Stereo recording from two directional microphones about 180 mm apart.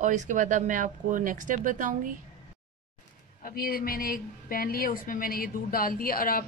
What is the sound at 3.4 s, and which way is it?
A woman's voice, 55° left (ahead or behind).